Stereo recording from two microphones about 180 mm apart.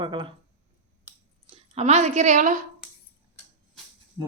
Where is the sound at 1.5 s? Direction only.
35° right (ahead or behind).